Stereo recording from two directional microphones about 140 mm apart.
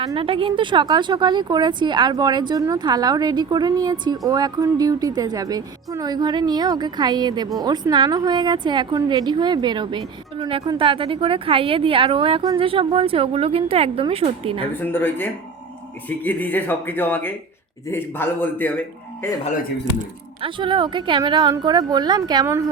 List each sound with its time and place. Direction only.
0.2 s a woman's voice: 40° right (ahead or behind)
14.8 s speech: 15° left (ahead or behind)
20.4 s a woman's voice: 35° right (ahead or behind)